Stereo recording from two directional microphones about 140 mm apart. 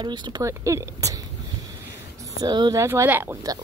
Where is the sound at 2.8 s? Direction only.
15° right (ahead or behind).